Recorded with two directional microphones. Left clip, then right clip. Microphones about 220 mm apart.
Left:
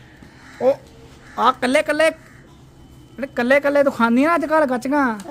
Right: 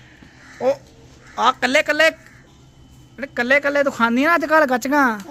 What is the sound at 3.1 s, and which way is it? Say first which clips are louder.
A man's voice: left 1 dB; 10° left (ahead or behind).